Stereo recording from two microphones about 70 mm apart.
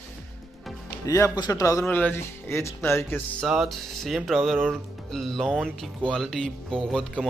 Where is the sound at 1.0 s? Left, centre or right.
Left.